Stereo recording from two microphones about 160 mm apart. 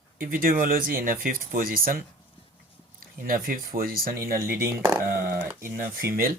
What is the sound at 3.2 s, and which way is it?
Speech, 60° right (ahead or behind).